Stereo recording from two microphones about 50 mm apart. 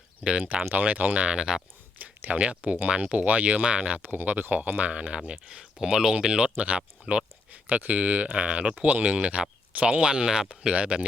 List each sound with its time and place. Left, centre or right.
0.7 s speech: right; by 1.5 s centre
2.0 s speech: right
4.1 s speech: right
4.9 s speech: right
7.5 s speech: right; by 10.7 s centre
10.7 s speech: right